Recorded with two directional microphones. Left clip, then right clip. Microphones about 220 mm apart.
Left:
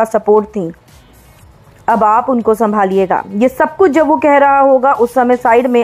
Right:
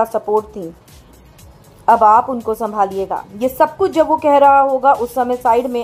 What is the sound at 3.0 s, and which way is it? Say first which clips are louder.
Speech: left 7 dB; 55° left (ahead or behind).